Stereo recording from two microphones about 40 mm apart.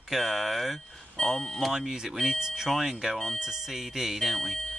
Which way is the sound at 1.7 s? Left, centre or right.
Centre.